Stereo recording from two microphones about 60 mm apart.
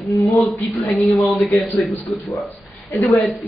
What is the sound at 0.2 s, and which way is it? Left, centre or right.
Speech, centre.